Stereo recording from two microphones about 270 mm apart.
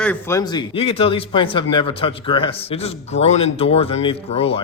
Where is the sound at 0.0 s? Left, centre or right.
Centre.